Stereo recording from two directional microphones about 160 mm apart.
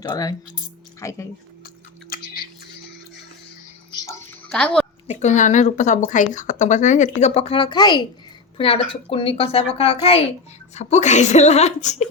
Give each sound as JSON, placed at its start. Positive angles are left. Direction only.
{"t": 0.0, "sound": "speech", "side_deg": 25}
{"t": 4.0, "sound": "music", "side_deg": 15}
{"t": 4.4, "sound": "a child's voice", "side_deg": 5}
{"t": 5.0, "sound": "a woman's voice", "side_deg": 45}